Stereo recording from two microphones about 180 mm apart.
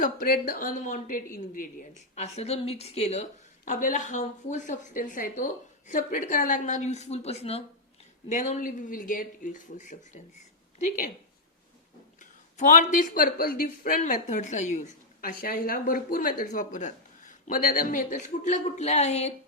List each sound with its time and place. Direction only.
0.0 s speech: 55° left (ahead or behind)
2.1 s speech: 35° left (ahead or behind)
3.7 s speech: 45° left (ahead or behind)
12.2 s speech: 45° left (ahead or behind)